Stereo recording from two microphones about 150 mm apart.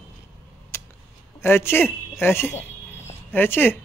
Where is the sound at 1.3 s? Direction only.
15° left (ahead or behind).